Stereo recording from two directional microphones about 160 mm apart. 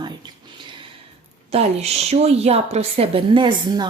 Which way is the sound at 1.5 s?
40° right (ahead or behind).